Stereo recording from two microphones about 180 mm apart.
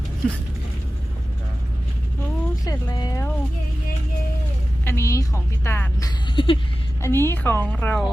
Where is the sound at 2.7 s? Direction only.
20° left (ahead or behind).